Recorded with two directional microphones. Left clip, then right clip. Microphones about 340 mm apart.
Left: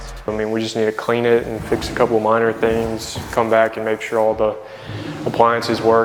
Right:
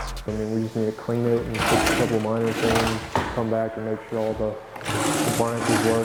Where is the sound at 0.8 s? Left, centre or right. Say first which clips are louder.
Left 8 dB; centre.